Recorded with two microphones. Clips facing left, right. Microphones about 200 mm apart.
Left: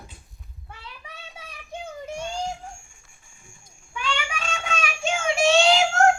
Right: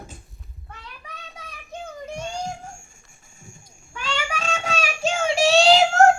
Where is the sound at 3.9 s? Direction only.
40° right (ahead or behind).